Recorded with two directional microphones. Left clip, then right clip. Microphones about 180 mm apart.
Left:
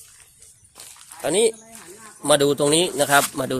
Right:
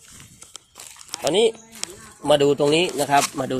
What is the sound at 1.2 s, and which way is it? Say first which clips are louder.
Speech: right 1 dB; 10° left (ahead or behind).